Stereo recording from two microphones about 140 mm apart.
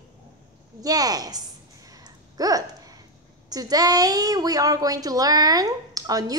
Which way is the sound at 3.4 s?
25° right (ahead or behind).